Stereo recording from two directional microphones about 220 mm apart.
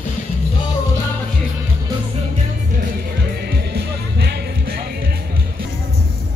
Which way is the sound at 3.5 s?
50° right (ahead or behind).